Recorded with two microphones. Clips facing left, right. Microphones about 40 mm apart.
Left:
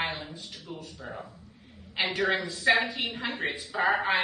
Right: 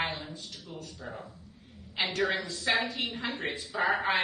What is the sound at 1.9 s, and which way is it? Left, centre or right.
A woman's voice, centre.